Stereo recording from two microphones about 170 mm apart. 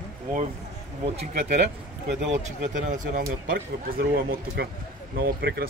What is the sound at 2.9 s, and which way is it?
Speech, 50° right (ahead or behind).